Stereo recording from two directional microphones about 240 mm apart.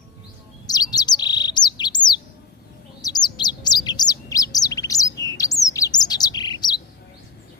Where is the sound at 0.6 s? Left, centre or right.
Centre.